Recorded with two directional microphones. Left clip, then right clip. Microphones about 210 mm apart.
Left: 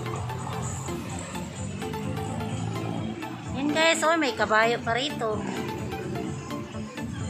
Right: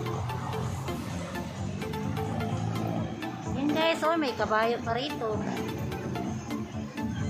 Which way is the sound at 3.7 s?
5° left (ahead or behind).